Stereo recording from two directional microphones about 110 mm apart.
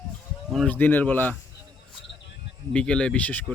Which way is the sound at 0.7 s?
15° left (ahead or behind).